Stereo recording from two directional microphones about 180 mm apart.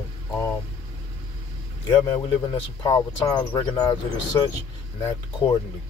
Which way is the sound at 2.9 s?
20° left (ahead or behind).